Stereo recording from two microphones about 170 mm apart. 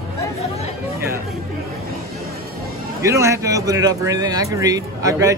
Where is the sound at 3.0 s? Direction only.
15° right (ahead or behind).